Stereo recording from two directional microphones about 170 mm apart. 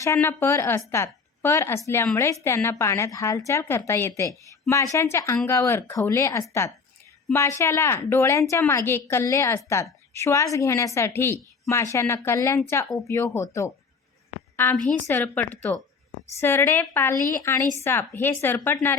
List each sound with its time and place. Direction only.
0.0 s a woman's voice: 15° left (ahead or behind)